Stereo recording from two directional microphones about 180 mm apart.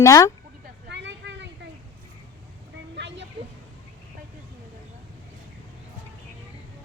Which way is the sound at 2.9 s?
75° right (ahead or behind).